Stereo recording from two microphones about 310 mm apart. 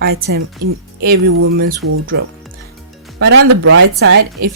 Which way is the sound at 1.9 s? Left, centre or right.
Right.